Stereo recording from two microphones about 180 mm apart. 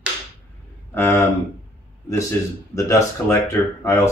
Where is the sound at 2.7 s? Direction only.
15° left (ahead or behind).